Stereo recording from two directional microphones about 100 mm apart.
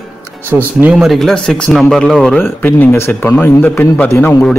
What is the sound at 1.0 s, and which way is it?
Speech, centre (ahead or behind).